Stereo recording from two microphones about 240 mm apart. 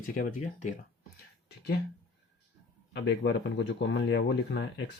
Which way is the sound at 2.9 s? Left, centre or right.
Left.